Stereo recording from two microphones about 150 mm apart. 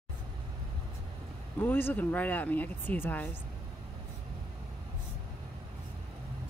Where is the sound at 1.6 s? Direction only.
15° left (ahead or behind).